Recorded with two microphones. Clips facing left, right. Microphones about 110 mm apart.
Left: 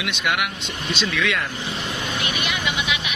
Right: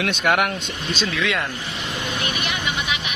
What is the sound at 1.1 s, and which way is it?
Speech, 25° right (ahead or behind).